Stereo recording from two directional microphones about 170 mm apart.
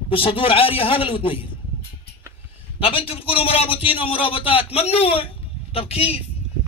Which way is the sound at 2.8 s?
35° left (ahead or behind).